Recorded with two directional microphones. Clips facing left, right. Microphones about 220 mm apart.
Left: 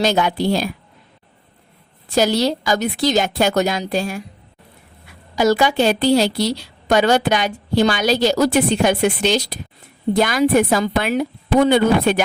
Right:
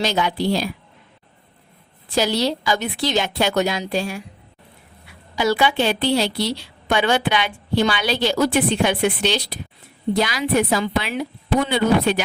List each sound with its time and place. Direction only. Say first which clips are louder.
0.0 s a woman's voice: left 3 dB; 45° left (ahead or behind)
2.1 s a woman's voice: left 3 dB; 45° left (ahead or behind)
5.4 s a woman's voice: left 4 dB; 45° left (ahead or behind)